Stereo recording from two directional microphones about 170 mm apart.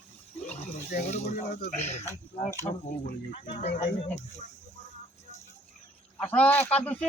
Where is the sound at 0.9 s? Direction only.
65° left (ahead or behind).